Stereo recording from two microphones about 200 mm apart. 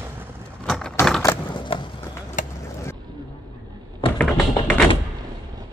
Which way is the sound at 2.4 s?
40° left (ahead or behind).